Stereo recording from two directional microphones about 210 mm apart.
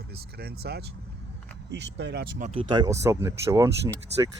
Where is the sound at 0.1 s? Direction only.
50° right (ahead or behind).